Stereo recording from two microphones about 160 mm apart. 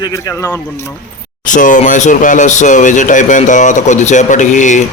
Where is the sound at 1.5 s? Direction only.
55° left (ahead or behind).